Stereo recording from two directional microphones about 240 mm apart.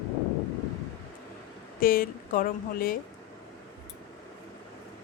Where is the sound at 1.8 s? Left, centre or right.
Left.